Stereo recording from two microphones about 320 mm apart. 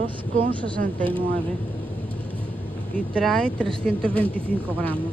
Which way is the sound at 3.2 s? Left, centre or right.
Centre.